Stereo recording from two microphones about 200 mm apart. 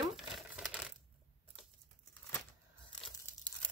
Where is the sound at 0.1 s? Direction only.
5° right (ahead or behind).